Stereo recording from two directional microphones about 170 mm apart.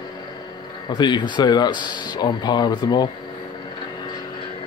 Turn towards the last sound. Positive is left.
turn(degrees=25)  # may be behind; listen again after turning